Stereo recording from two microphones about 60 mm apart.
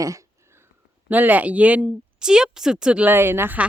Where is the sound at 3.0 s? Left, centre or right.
Right.